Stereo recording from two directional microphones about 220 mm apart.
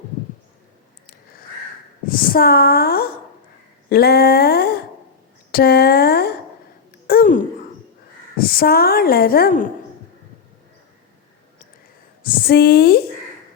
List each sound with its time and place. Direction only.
2.0 s a woman's voice: 40° left (ahead or behind)
7.1 s a sound: 40° left (ahead or behind)
8.4 s a woman's voice: 40° left (ahead or behind)
12.2 s a woman's voice: 40° left (ahead or behind)